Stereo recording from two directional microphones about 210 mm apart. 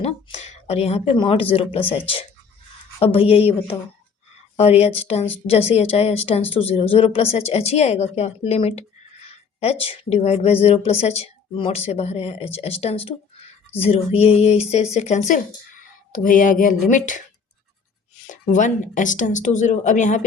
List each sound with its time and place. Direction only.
0.0 s speech: 30° left (ahead or behind)
18.3 s speech: 35° left (ahead or behind)